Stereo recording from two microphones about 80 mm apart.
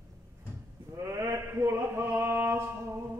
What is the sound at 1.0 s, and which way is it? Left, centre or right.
Chant, right.